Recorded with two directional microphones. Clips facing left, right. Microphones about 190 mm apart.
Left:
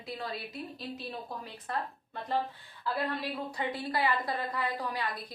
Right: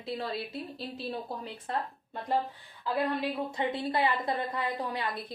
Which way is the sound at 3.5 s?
25° right (ahead or behind).